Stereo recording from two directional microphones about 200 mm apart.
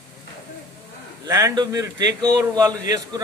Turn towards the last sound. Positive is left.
turn(degrees=-15)  # may be behind; listen again after turning